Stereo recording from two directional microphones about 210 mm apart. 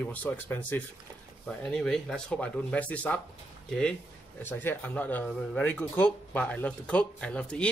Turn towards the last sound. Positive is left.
turn(degrees=5)  # may be behind; listen again after turning